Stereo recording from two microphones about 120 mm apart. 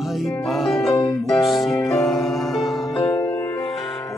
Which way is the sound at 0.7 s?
Centre (ahead or behind).